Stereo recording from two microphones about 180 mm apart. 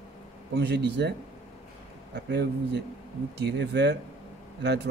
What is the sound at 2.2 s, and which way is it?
A man's voice, 70° right (ahead or behind).